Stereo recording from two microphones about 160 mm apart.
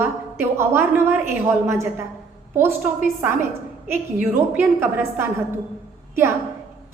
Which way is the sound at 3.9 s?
15° right (ahead or behind).